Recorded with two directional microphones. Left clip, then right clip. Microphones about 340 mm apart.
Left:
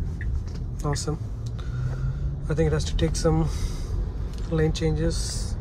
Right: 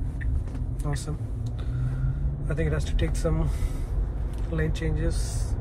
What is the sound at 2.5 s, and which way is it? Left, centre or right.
Speech, centre.